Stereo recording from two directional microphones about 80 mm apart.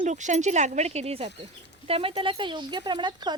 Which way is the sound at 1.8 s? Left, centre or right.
Left.